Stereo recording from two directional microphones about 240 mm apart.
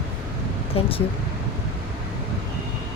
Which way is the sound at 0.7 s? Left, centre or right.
Left.